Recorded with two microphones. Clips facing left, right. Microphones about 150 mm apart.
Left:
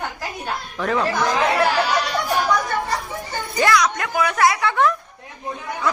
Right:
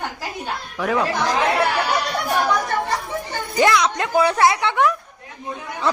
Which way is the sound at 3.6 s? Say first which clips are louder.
Right 1 dB; 20° right (ahead or behind).